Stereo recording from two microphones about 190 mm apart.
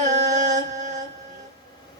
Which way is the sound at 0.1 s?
40° right (ahead or behind).